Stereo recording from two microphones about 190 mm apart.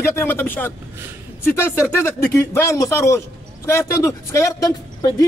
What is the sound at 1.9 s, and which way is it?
A man's voice, 10° left (ahead or behind).